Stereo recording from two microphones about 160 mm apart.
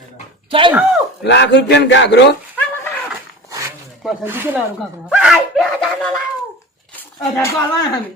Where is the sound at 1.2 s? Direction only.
90° left.